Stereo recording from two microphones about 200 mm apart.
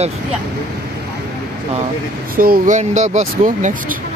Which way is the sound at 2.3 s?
45° right (ahead or behind).